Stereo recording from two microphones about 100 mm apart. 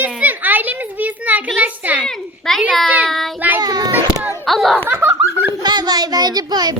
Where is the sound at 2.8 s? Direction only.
15° right (ahead or behind).